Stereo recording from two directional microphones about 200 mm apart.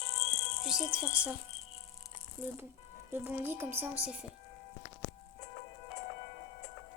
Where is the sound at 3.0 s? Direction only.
10° right (ahead or behind).